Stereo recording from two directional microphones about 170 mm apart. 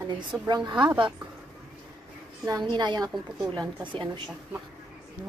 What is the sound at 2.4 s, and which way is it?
A woman's voice, 25° right (ahead or behind).